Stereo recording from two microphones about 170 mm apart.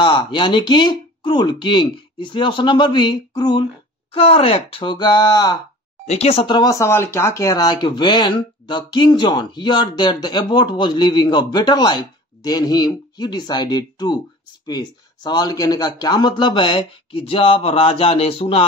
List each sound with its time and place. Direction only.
0.0 s speech: 25° left (ahead or behind)
6.0 s speech: 35° left (ahead or behind)